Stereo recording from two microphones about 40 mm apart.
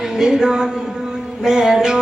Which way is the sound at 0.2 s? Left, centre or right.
Centre.